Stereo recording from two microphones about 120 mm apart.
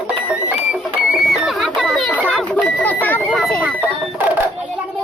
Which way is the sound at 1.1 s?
5° right (ahead or behind).